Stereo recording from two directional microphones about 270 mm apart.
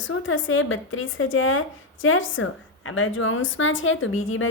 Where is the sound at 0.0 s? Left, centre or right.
Left.